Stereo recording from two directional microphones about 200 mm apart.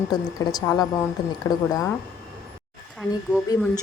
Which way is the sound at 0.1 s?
20° left (ahead or behind).